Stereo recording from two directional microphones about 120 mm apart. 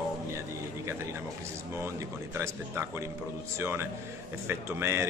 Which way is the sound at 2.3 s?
20° right (ahead or behind).